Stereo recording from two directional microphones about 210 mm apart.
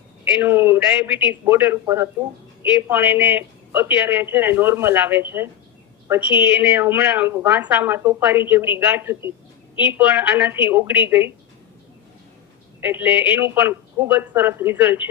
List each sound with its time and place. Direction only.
0.3 s a woman's voice: 10° right (ahead or behind)
12.8 s a woman's voice: 10° right (ahead or behind)